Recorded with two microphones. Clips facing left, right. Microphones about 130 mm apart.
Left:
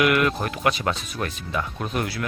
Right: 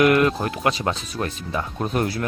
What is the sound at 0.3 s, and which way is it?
Speech, 25° right (ahead or behind).